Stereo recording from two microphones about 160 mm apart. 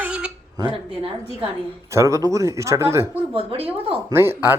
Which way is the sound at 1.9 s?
20° right (ahead or behind).